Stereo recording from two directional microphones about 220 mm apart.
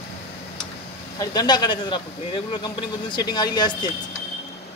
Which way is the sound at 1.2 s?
20° left (ahead or behind).